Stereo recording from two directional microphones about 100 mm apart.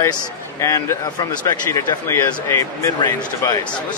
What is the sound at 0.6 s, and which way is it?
Speech, 35° left (ahead or behind).